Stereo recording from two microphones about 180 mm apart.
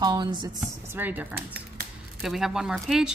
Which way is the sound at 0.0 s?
25° right (ahead or behind).